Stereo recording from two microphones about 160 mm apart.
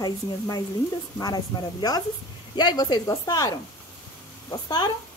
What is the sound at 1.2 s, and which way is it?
A woman's voice, 25° left (ahead or behind).